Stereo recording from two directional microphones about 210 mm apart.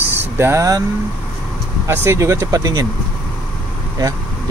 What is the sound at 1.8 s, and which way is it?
Speech, 10° right (ahead or behind).